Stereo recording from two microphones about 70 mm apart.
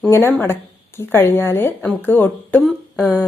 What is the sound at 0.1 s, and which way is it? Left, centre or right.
Speech, left.